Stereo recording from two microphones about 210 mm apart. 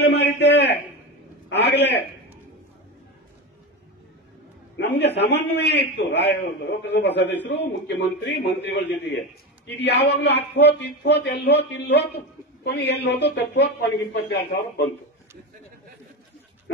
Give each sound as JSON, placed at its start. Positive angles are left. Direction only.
{"t": 0.0, "sound": "a man's voice", "side_deg": 50}
{"t": 4.7, "sound": "a man's voice", "side_deg": 55}